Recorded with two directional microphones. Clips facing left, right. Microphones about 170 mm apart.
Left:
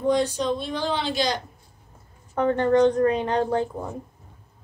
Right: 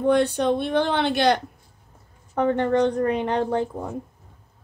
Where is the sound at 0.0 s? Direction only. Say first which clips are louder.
Right 3 dB; 60° right (ahead or behind).